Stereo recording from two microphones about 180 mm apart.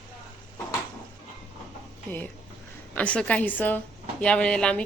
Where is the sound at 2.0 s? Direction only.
10° left (ahead or behind).